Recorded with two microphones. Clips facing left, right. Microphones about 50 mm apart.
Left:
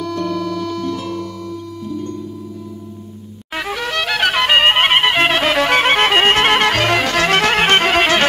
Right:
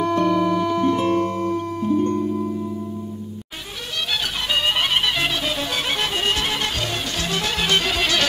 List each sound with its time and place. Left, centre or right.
0.0 s music: right
3.9 s music: left